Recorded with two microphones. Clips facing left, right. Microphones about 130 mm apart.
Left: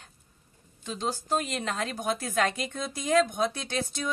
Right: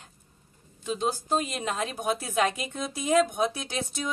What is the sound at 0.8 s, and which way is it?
A woman's voice, 10° right (ahead or behind).